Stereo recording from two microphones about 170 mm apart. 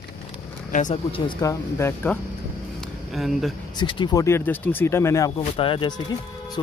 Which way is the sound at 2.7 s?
Centre (ahead or behind).